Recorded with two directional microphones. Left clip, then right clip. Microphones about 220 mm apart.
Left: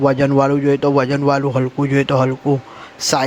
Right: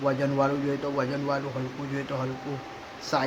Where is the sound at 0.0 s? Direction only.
40° left (ahead or behind).